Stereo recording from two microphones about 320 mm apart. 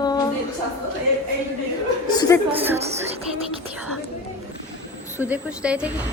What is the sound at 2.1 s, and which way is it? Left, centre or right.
Speech, centre.